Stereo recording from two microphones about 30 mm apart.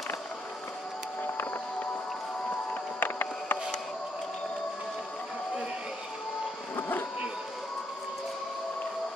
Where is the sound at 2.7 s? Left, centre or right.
Left.